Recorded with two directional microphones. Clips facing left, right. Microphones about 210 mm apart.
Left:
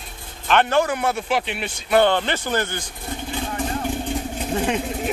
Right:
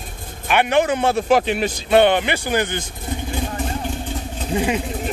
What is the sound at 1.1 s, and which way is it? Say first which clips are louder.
Speech: right 7 dB; 40° right (ahead or behind).